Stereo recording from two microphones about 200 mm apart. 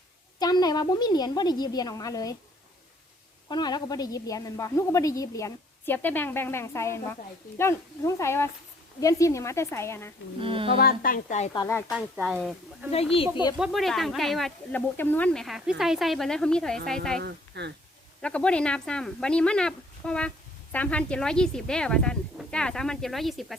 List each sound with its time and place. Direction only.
0.3 s a woman's voice: 20° left (ahead or behind)
3.5 s a woman's voice: 20° left (ahead or behind)
10.4 s speech: 25° right (ahead or behind)
10.8 s a woman's voice: 45° left (ahead or behind)
11.5 s a woman's voice: 15° left (ahead or behind)
11.9 s speech: 5° right (ahead or behind)
13.3 s a woman's voice: 20° left (ahead or behind)
13.6 s speech: centre (ahead or behind)
17.2 s speech: 55° right (ahead or behind)
18.2 s speech: 5° left (ahead or behind)